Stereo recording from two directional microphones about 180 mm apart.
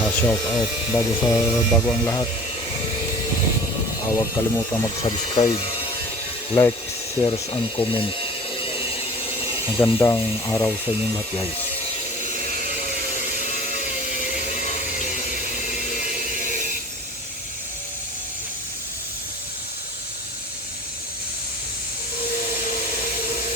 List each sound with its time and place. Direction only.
0.0 s speech: 10° left (ahead or behind)
0.4 s speech: 20° left (ahead or behind)
4.1 s speech: 20° left (ahead or behind)
7.2 s ratchet: 25° left (ahead or behind)
9.6 s speech: 25° left (ahead or behind)
12.2 s a sound: 40° left (ahead or behind)